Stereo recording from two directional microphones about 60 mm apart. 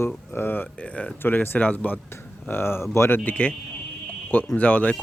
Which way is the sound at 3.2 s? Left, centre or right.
Left.